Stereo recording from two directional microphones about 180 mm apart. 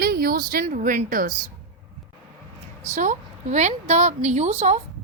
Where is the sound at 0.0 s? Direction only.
55° right (ahead or behind).